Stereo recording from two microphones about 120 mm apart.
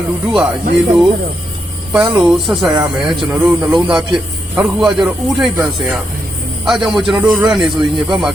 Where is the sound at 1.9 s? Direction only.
10° right (ahead or behind).